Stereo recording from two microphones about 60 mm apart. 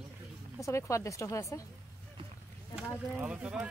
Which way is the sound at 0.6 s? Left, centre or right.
Left.